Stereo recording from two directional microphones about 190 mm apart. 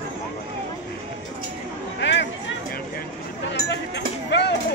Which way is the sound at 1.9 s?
65° left (ahead or behind).